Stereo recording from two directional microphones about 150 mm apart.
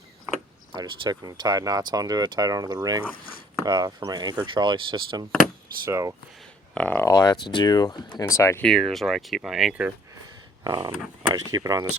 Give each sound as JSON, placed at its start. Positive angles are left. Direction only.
{"t": 0.7, "sound": "speech", "side_deg": -30}
{"t": 6.7, "sound": "speech", "side_deg": 10}
{"t": 7.1, "sound": "speech", "side_deg": 25}
{"t": 8.6, "sound": "speech", "side_deg": 0}
{"t": 10.6, "sound": "speech", "side_deg": -30}